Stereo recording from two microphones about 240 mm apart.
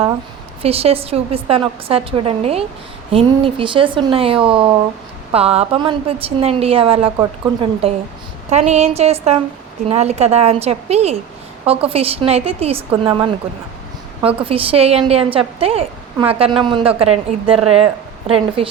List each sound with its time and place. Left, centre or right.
0.6 s a woman's voice: right